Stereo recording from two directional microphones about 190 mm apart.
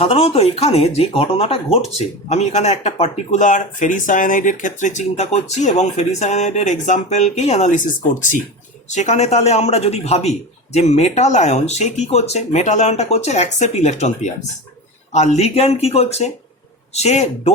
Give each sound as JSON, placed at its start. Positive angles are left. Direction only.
{"t": 0.0, "sound": "a man's voice", "side_deg": 30}